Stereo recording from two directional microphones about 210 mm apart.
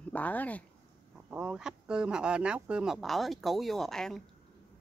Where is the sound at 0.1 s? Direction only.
5° left (ahead or behind).